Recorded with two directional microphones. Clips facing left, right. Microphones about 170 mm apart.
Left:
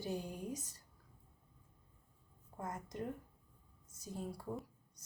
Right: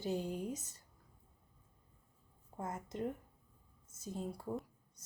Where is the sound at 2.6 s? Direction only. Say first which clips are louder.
Right 3 dB; 25° right (ahead or behind).